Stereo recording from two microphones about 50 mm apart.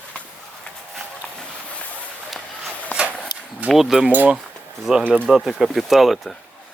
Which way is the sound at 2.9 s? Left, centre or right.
Left.